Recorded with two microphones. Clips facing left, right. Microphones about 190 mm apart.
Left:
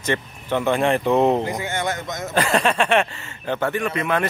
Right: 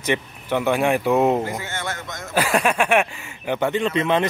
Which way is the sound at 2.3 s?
10° right (ahead or behind).